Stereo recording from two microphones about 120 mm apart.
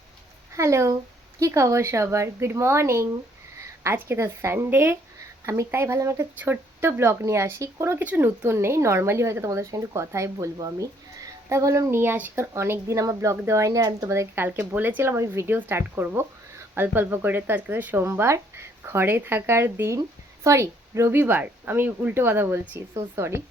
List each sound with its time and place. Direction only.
0.5 s a woman's voice: 25° right (ahead or behind)
6.4 s speech: 15° right (ahead or behind)